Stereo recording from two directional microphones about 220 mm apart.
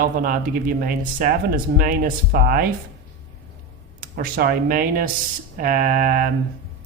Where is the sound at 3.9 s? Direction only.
40° right (ahead or behind).